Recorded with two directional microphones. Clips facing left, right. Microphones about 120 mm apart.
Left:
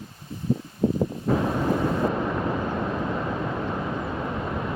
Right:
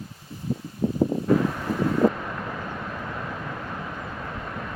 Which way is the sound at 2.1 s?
25° left (ahead or behind).